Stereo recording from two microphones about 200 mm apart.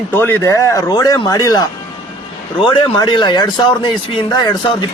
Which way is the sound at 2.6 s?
25° left (ahead or behind).